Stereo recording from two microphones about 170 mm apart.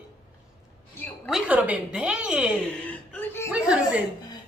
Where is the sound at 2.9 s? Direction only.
10° left (ahead or behind).